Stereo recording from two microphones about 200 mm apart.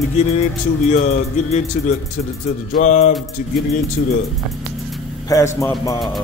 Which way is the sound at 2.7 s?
35° left (ahead or behind).